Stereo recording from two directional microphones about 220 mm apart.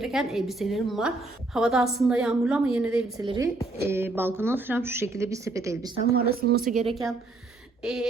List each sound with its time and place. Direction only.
0.0 s a woman's voice: centre (ahead or behind)
3.2 s a woman's voice: 15° right (ahead or behind)
6.1 s speech: 45° right (ahead or behind)
7.8 s a sound: centre (ahead or behind)